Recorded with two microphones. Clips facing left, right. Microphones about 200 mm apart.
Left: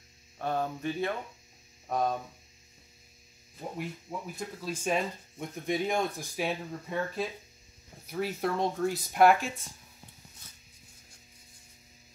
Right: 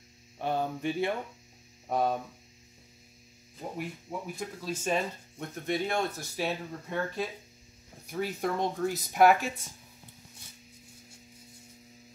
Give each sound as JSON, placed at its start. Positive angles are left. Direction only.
{"t": 0.4, "sound": "hum", "side_deg": -15}
{"t": 3.7, "sound": "speech", "side_deg": 0}